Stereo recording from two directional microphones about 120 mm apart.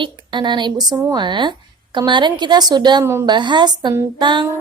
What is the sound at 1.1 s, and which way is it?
A woman's voice, 40° right (ahead or behind).